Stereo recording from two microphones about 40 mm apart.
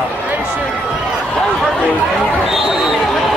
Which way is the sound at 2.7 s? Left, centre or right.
Centre.